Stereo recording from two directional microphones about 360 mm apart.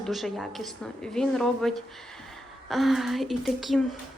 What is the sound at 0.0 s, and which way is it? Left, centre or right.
A woman's voice, centre.